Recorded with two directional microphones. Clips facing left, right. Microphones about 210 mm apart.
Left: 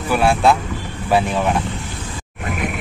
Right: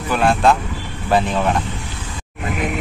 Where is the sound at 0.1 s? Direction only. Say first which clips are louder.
Even; 10° left (ahead or behind).